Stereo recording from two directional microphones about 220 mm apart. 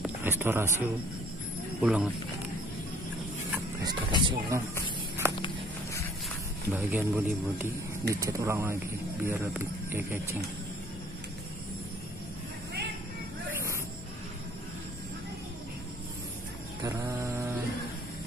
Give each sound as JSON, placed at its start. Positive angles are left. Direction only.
{"t": 0.0, "sound": "a sound", "side_deg": -10}
{"t": 1.8, "sound": "speech", "side_deg": -5}
{"t": 3.5, "sound": "speech", "side_deg": -20}
{"t": 4.8, "sound": "a sound", "side_deg": -10}
{"t": 6.7, "sound": "speech", "side_deg": -10}
{"t": 13.5, "sound": "music", "side_deg": -10}
{"t": 16.8, "sound": "mantra", "side_deg": -15}